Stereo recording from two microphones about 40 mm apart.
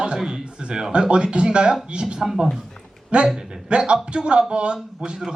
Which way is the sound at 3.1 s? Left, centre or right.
Right.